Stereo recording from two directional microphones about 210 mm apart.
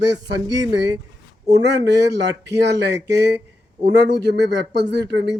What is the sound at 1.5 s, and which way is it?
Speech, 55° right (ahead or behind).